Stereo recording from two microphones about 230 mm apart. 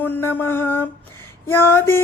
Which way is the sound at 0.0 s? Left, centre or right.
Centre.